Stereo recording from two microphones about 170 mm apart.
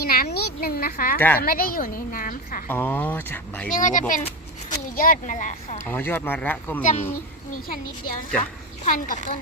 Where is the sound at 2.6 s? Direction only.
10° left (ahead or behind).